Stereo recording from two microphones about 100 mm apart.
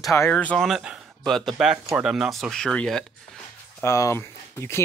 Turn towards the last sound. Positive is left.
turn(degrees=25)  # may be behind; listen again after turning